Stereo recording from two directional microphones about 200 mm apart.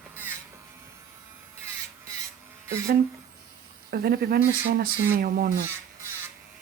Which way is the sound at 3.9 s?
50° right (ahead or behind).